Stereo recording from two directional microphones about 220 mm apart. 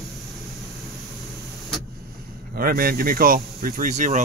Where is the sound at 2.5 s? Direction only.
40° right (ahead or behind).